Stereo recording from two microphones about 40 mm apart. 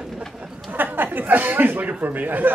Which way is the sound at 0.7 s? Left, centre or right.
Right.